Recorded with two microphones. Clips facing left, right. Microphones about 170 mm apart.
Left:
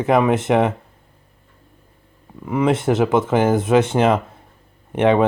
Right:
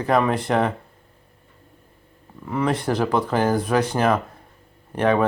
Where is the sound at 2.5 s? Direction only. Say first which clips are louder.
Left 5 dB; 20° left (ahead or behind).